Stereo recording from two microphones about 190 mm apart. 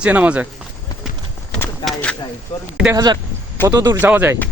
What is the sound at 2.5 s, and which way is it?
Speech, 30° left (ahead or behind).